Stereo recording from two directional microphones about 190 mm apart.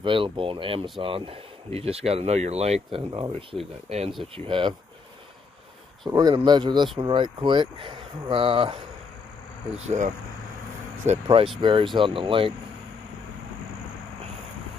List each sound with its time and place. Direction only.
0.0 s speech: 25° right (ahead or behind)
3.0 s speech: 25° right (ahead or behind)
6.0 s speech: 20° right (ahead or behind)
9.8 s speech: 40° right (ahead or behind)
11.1 s speech: 30° right (ahead or behind)